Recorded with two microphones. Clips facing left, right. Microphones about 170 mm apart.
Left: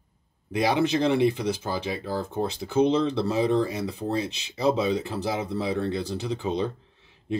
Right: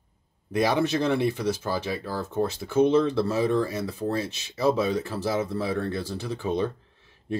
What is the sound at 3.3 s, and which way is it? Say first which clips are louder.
Speech: left 1 dB; 15° left (ahead or behind).